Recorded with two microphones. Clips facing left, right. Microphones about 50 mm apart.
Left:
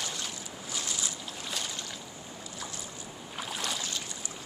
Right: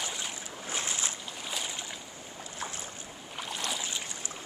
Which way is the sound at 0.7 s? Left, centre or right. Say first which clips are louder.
Right 2 dB; right.